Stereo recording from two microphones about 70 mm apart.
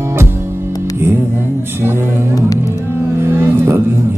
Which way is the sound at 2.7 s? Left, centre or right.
Right.